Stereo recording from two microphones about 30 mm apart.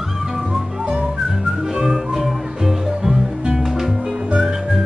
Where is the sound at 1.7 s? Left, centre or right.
Centre.